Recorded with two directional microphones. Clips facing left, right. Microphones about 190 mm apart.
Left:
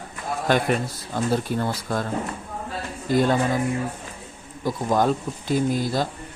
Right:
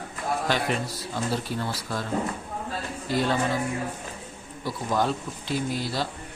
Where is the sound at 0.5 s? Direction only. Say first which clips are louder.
Left 10 dB; 50° left (ahead or behind).